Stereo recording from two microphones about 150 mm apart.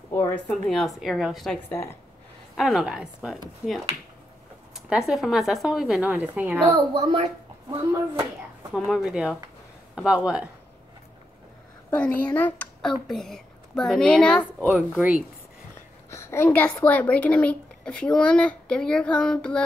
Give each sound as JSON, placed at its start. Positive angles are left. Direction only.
{"t": 0.1, "sound": "speech", "side_deg": 10}
{"t": 1.7, "sound": "a woman's voice", "side_deg": 15}
{"t": 2.5, "sound": "speech", "side_deg": 0}
{"t": 6.7, "sound": "speech", "side_deg": -35}
{"t": 8.7, "sound": "speech", "side_deg": 0}
{"t": 12.2, "sound": "speech", "side_deg": 10}
{"t": 14.7, "sound": "speech", "side_deg": -15}
{"t": 16.1, "sound": "a woman's voice", "side_deg": 15}